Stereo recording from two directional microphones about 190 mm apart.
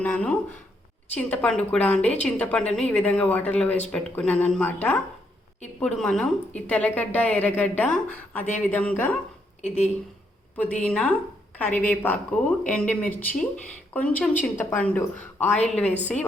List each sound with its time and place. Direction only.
0.0 s a woman's voice: 10° left (ahead or behind)
9.6 s speech: 35° left (ahead or behind)
10.6 s a woman's voice: 5° left (ahead or behind)